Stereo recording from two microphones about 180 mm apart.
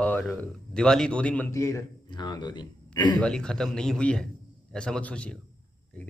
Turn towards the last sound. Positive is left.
turn(degrees=5)  # may be behind; listen again after turning